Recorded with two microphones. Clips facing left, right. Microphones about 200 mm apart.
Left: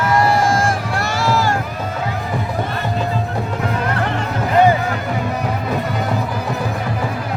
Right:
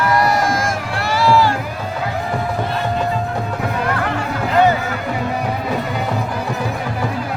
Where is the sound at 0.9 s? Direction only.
45° left (ahead or behind).